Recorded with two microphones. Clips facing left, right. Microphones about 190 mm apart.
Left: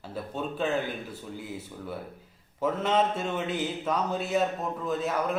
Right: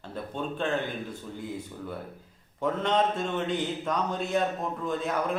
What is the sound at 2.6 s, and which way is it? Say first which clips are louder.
Speech: even; 5° left (ahead or behind).